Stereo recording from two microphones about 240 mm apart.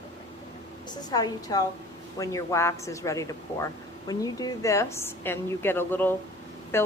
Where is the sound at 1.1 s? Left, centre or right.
Centre.